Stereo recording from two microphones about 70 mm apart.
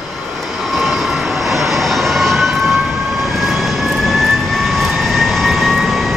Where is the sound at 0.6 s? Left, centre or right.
Centre.